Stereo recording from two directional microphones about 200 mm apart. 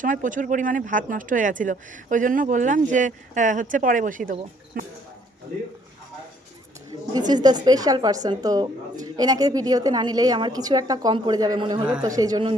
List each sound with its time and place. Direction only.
0.0 s speech: 40° right (ahead or behind)
7.1 s a woman's voice: 20° right (ahead or behind)